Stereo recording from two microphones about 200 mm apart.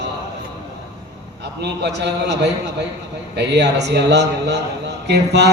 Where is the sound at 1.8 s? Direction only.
60° right (ahead or behind).